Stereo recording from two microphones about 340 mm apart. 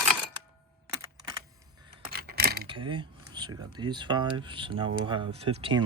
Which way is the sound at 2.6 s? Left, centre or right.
Centre.